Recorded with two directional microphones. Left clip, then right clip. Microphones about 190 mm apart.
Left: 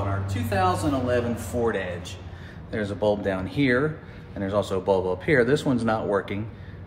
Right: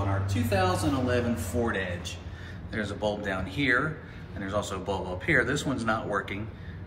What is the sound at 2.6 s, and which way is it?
A man's voice, 50° left (ahead or behind).